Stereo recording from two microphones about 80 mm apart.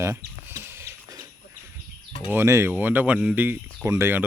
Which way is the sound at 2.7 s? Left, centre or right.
Right.